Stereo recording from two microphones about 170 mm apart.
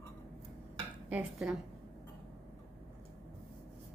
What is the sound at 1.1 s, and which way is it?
Speech, 5° right (ahead or behind).